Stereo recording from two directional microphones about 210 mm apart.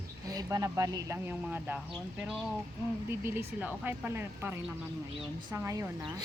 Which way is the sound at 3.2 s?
10° right (ahead or behind).